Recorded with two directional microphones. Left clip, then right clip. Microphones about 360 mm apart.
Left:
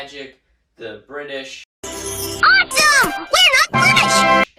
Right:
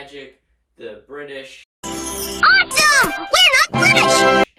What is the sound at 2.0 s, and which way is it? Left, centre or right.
Music, centre.